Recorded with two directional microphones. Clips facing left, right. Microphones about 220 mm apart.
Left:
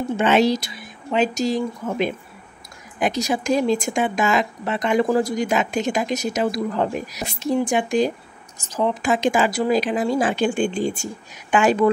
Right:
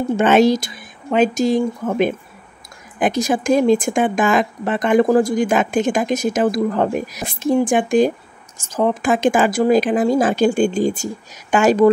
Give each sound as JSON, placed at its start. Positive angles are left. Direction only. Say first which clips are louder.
{"t": 0.2, "sound": "speech", "louder": "right 4 dB", "side_deg": -50}